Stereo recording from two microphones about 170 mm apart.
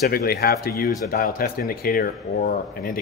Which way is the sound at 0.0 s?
65° left (ahead or behind).